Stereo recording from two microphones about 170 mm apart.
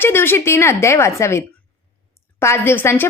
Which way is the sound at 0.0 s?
15° left (ahead or behind).